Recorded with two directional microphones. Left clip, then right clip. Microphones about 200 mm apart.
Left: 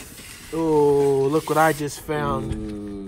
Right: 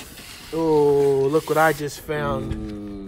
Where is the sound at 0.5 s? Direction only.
10° left (ahead or behind).